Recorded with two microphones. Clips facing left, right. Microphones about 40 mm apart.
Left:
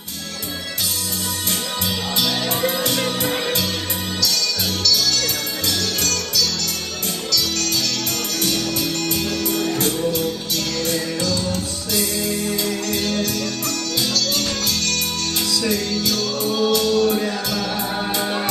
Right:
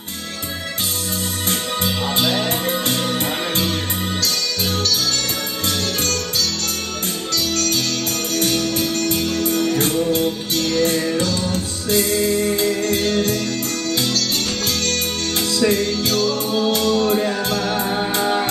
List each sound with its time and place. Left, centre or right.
1.5 s music: right
18.2 s music: centre